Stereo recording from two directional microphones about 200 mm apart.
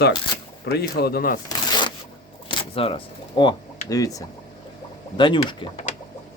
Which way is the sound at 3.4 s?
20° left (ahead or behind).